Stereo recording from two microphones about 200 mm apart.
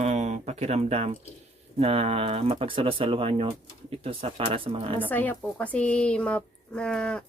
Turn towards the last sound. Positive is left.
turn(degrees=5)  # may be behind; listen again after turning